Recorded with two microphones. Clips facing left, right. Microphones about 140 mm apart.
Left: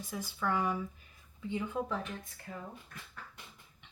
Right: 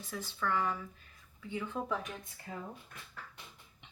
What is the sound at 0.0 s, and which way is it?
Speech, 10° left (ahead or behind).